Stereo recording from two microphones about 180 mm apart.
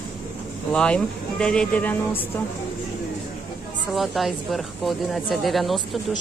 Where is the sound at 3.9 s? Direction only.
Centre (ahead or behind).